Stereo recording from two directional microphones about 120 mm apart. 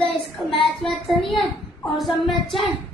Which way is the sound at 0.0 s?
45° left (ahead or behind).